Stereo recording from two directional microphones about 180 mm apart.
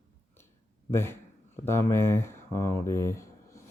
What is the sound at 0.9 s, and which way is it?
Speech, 15° left (ahead or behind).